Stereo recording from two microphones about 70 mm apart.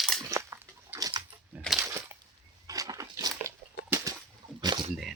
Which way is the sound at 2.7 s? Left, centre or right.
Right.